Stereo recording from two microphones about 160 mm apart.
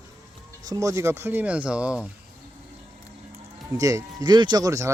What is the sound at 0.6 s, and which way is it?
Speech, 20° right (ahead or behind).